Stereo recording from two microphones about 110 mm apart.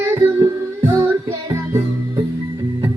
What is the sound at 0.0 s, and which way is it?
Music, 20° right (ahead or behind).